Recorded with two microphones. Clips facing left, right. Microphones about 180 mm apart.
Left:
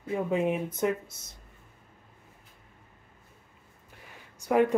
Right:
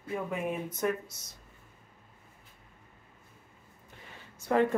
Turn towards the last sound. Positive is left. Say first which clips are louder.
# left 3 dB
turn(degrees=15)  # may be behind; listen again after turning